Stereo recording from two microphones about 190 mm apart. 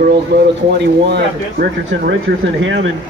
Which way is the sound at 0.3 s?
65° right (ahead or behind).